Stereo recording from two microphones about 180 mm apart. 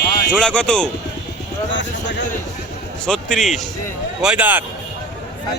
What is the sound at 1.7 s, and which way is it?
Speech, 85° left.